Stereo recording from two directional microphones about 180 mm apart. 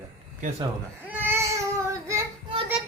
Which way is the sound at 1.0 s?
10° right (ahead or behind).